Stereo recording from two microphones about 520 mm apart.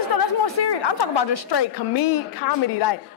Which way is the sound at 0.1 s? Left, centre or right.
Left.